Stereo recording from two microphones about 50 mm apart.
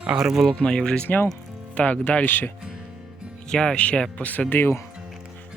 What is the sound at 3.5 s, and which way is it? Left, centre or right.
Speech, centre.